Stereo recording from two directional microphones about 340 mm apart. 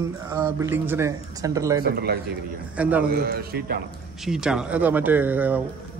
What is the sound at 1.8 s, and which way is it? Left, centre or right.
Speech, right.